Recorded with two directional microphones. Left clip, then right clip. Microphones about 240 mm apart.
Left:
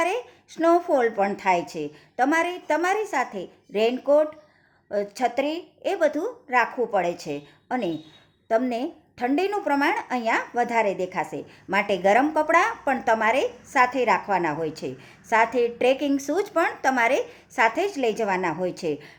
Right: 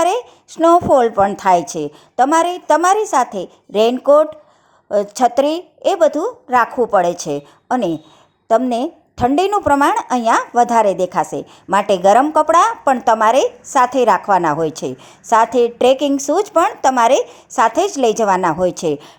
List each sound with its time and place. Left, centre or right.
0.0 s a woman's voice: right
10.7 s speech: right
11.3 s a woman's voice: right